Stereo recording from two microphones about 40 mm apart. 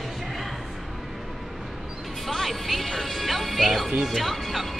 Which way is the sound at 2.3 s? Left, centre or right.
Centre.